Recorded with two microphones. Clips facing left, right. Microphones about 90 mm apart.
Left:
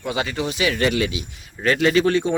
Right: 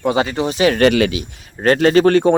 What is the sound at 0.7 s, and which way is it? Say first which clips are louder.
Speech: right 7 dB; 75° right (ahead or behind).